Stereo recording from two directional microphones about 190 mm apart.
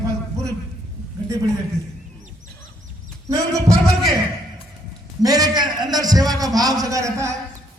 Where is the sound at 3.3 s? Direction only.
20° right (ahead or behind).